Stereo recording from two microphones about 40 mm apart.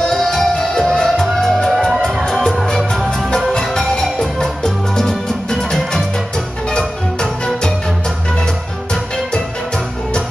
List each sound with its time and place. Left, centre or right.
0.0 s music: centre
3.5 s music: centre